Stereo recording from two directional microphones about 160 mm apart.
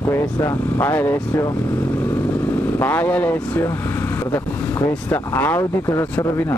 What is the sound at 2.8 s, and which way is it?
Speech, 10° left (ahead or behind).